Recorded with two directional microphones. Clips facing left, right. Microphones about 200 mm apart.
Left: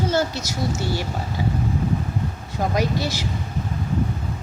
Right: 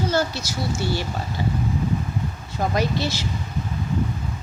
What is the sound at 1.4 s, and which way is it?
Speech, 10° left (ahead or behind).